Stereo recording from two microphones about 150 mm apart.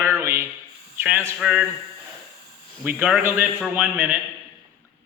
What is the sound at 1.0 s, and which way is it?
Speech, 15° right (ahead or behind).